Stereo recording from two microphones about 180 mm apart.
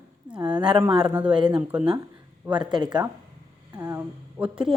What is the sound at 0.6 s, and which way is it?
Speech, 5° right (ahead or behind).